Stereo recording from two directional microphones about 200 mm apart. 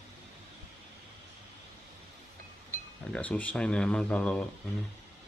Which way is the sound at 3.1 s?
5° left (ahead or behind).